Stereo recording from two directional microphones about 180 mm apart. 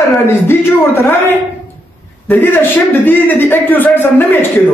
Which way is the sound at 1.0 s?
10° left (ahead or behind).